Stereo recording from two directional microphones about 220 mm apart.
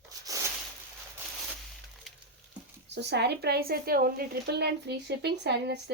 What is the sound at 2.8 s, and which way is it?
Speech, 50° right (ahead or behind).